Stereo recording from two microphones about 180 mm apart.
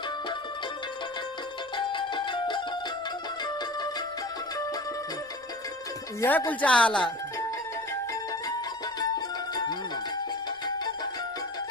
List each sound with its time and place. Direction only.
1.7 s music: 25° left (ahead or behind)
6.1 s speech: 15° left (ahead or behind)
9.0 s music: 20° left (ahead or behind)